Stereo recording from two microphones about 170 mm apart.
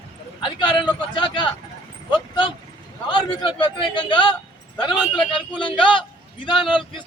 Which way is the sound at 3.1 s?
25° left (ahead or behind).